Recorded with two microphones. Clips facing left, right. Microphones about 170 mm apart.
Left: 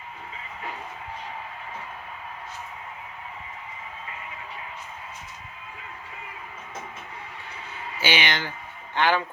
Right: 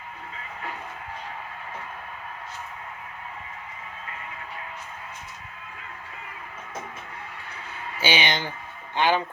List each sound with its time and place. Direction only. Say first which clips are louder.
8.0 s speech: right 1 dB; 15° right (ahead or behind)